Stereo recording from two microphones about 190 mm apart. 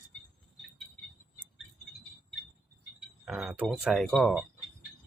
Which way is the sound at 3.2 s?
5° right (ahead or behind).